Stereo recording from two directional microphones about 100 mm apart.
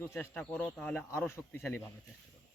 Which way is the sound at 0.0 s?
20° left (ahead or behind).